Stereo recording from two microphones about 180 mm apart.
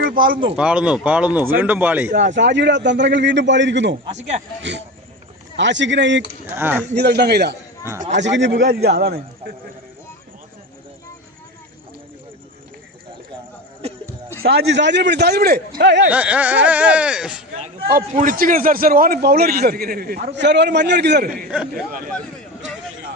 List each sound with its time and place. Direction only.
0.5 s speech: 5° right (ahead or behind)
2.3 s a man's voice: 80° right
6.5 s speech: 10° right (ahead or behind)
6.9 s a man's voice: 65° right (ahead or behind)
8.1 s a man's voice: 85° right
14.4 s a man's voice: 70° right (ahead or behind)
16.0 s speech: 10° right (ahead or behind)
17.8 s a man's voice: 50° right (ahead or behind)
21.5 s speech: 5° right (ahead or behind)